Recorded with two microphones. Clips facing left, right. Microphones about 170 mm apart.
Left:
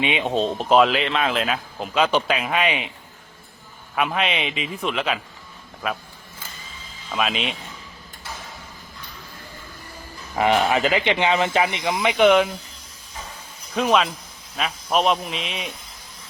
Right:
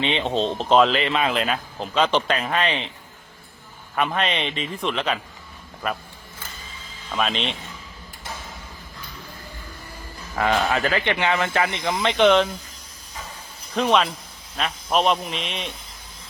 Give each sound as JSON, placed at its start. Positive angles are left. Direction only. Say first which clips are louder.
{"t": 0.0, "sound": "speech", "louder": "left 1 dB", "side_deg": 10}
{"t": 3.9, "sound": "a man's voice", "louder": "even", "side_deg": 5}
{"t": 7.1, "sound": "a man's voice", "louder": "even", "side_deg": 5}
{"t": 10.3, "sound": "speech", "louder": "left 3 dB", "side_deg": 20}
{"t": 13.7, "sound": "a man's voice", "louder": "even", "side_deg": 0}